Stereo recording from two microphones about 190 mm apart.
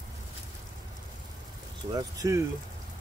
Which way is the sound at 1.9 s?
20° right (ahead or behind).